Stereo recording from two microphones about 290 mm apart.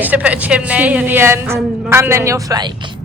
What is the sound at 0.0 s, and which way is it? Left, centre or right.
A woman's voice, centre.